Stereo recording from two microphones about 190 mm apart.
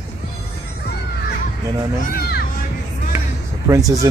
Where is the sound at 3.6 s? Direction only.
15° right (ahead or behind).